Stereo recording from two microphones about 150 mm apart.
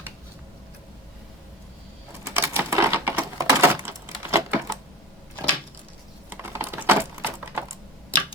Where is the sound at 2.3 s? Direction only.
15° right (ahead or behind).